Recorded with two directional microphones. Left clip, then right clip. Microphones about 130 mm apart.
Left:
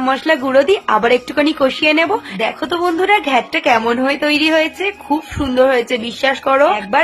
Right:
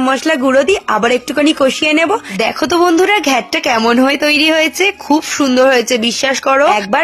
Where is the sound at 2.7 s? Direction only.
45° right (ahead or behind).